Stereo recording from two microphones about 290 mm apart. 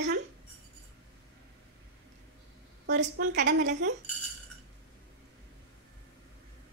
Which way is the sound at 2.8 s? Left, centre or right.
Right.